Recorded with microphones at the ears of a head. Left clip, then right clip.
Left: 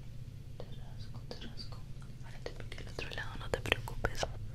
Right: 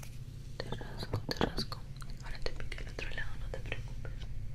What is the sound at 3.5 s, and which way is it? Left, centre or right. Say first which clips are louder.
Whispering: left 9 dB; left.